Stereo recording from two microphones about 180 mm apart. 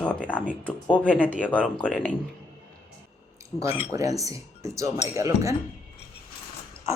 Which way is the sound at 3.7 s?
30° left (ahead or behind).